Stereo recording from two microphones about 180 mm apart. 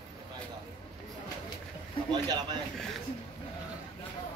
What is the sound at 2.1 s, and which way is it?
Speech, 25° right (ahead or behind).